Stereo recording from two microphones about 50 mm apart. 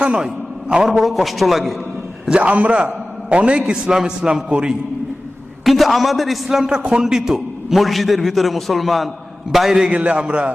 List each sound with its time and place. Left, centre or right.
0.2 s a sound: centre
0.9 s a man's voice: centre
2.3 s a man's voice: right
3.9 s a man's voice: centre
4.4 s a man's voice: right
5.6 s a man's voice: centre
9.8 s a man's voice: right